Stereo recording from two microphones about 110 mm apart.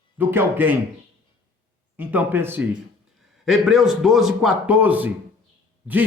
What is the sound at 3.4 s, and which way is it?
A man's voice, 5° right (ahead or behind).